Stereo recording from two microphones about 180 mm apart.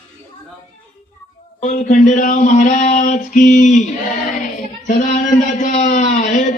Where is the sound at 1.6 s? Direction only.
40° left (ahead or behind).